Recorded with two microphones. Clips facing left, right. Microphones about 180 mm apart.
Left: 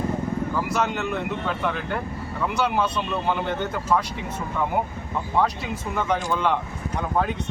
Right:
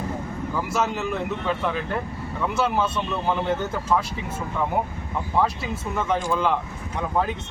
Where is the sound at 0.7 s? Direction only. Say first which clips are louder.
Even; 5° right (ahead or behind).